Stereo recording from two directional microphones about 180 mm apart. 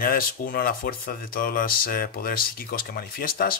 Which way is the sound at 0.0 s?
55° left (ahead or behind).